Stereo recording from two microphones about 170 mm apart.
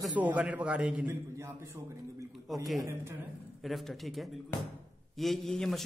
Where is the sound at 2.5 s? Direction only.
Centre (ahead or behind).